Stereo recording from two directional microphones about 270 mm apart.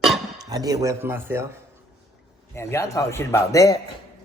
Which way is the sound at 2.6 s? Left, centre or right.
Centre.